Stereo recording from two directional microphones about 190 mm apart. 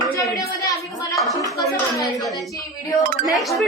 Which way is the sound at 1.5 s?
15° left (ahead or behind).